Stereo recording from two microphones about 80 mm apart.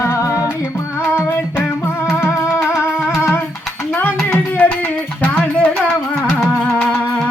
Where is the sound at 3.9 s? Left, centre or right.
Left.